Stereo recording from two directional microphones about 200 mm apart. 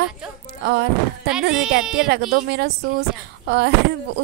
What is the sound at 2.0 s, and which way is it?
Speech, 50° right (ahead or behind).